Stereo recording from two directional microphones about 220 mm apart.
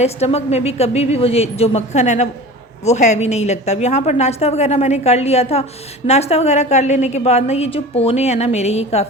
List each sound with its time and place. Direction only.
0.0 s a woman's voice: 30° left (ahead or behind)